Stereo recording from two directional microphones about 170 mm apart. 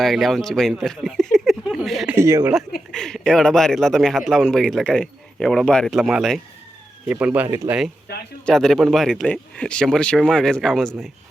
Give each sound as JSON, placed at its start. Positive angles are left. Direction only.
{"t": 0.0, "sound": "speech", "side_deg": 0}
{"t": 2.1, "sound": "speech", "side_deg": -15}
{"t": 2.9, "sound": "a man's voice", "side_deg": 5}
{"t": 8.1, "sound": "speech", "side_deg": 70}
{"t": 8.4, "sound": "a man's voice", "side_deg": 5}